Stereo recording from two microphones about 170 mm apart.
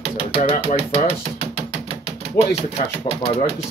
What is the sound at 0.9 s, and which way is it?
Speech, 35° left (ahead or behind).